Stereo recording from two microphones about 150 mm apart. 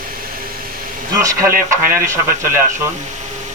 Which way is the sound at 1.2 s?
20° right (ahead or behind).